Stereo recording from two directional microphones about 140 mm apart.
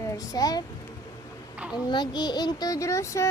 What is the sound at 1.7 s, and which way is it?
Speech, 30° left (ahead or behind).